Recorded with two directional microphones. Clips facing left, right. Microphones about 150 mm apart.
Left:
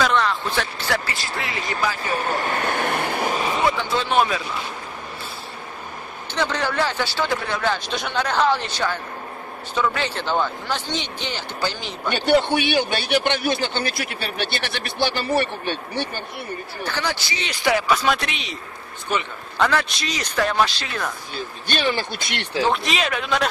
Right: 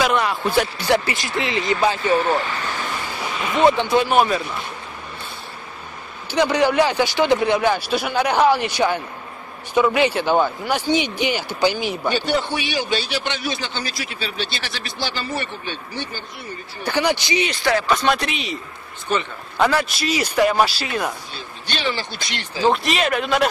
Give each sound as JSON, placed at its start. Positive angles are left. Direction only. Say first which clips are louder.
{"t": 0.0, "sound": "speech", "louder": "right 1 dB", "side_deg": -10}
{"t": 2.4, "sound": "a man's voice", "louder": "left 4 dB", "side_deg": 50}
{"t": 3.6, "sound": "speech", "louder": "right 11 dB", "side_deg": -20}
{"t": 4.1, "sound": "speech", "louder": "left 1 dB", "side_deg": -5}
{"t": 6.3, "sound": "a man's voice", "louder": "right 7 dB", "side_deg": -15}
{"t": 12.1, "sound": "a man's voice", "louder": "left 5 dB", "side_deg": 60}
{"t": 16.8, "sound": "a man's voice", "louder": "right 7 dB", "side_deg": -15}
{"t": 17.5, "sound": "speech", "louder": "left 2 dB", "side_deg": 10}
{"t": 19.6, "sound": "a man's voice", "louder": "right 2 dB", "side_deg": -5}
{"t": 21.6, "sound": "speech", "louder": "left 2 dB", "side_deg": 55}
{"t": 22.6, "sound": "speech", "louder": "right 3 dB", "side_deg": 0}